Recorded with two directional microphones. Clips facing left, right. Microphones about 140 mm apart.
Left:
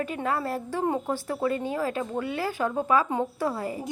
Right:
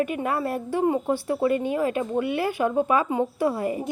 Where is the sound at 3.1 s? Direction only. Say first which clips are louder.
Right 4 dB; 15° right (ahead or behind).